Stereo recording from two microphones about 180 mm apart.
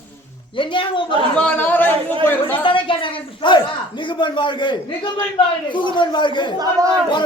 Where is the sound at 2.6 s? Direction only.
30° left (ahead or behind).